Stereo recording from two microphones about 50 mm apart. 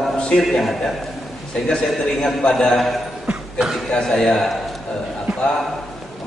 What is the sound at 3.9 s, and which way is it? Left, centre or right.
Speech, centre.